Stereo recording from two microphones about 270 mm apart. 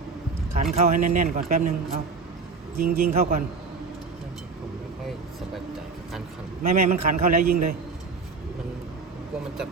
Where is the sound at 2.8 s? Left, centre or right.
Right.